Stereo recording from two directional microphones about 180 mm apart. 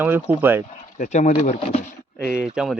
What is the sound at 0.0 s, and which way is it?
Speech, 10° right (ahead or behind).